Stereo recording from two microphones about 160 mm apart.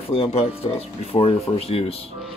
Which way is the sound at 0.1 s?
35° left (ahead or behind).